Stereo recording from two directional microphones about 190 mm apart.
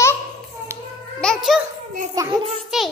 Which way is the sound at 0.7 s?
15° right (ahead or behind).